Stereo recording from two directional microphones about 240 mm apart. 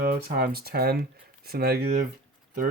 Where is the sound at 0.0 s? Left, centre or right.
Right.